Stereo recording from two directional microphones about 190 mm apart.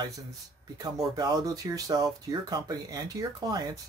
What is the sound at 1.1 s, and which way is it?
Speech, 20° right (ahead or behind).